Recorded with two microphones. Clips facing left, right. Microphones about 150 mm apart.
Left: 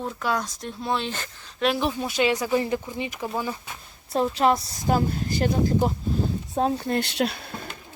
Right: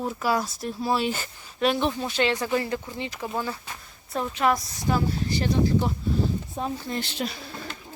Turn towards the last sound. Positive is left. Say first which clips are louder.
# left 5 dB
turn(degrees=65)  # may be behind; listen again after turning